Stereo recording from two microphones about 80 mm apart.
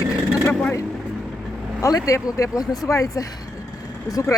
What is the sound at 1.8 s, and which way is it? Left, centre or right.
Speech, left.